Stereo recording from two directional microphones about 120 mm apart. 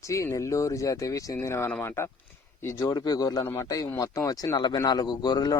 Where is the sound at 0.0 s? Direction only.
25° left (ahead or behind).